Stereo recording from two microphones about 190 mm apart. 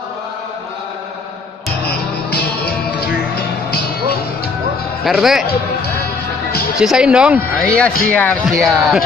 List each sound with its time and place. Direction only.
1.9 s music: 55° left (ahead or behind)
5.0 s speech: centre (ahead or behind)
6.8 s speech: 5° right (ahead or behind)
7.6 s speech: 5° left (ahead or behind)